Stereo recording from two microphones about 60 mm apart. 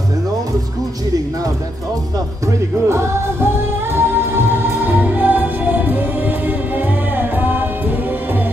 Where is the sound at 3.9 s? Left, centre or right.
Right.